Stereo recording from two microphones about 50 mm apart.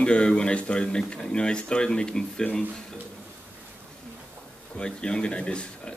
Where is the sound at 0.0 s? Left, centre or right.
Centre.